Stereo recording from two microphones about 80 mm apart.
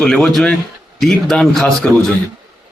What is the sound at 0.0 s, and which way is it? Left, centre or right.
A man's voice, centre.